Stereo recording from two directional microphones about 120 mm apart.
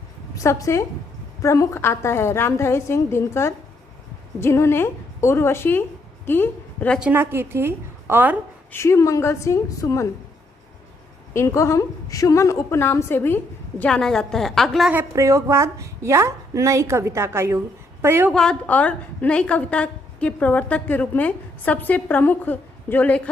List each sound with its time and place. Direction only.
0.3 s a woman's voice: 25° left (ahead or behind)
7.0 s a woman's voice: 15° right (ahead or behind)
8.7 s a woman's voice: 25° left (ahead or behind)
11.3 s a woman's voice: 25° left (ahead or behind); by 14.8 s 5° left (ahead or behind)
15.1 s a woman's voice: 25° right (ahead or behind)
18.3 s a woman's voice: 5° left (ahead or behind)